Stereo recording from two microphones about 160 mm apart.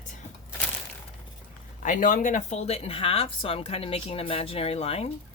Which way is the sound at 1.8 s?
55° left (ahead or behind).